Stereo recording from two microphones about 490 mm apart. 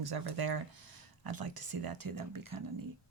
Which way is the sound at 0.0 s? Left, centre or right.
Right.